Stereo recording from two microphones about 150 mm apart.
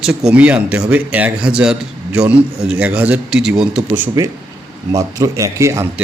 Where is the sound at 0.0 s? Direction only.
5° right (ahead or behind).